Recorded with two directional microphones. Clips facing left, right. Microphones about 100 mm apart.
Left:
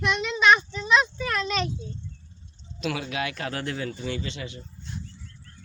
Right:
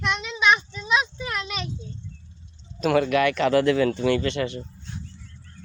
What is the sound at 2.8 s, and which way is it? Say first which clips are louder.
Speech: right 10 dB; 55° right (ahead or behind).